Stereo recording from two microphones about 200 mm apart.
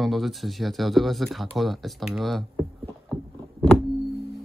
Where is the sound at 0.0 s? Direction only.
Centre (ahead or behind).